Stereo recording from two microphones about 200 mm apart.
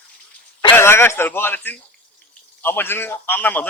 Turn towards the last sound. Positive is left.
turn(degrees=10)  # may be behind; listen again after turning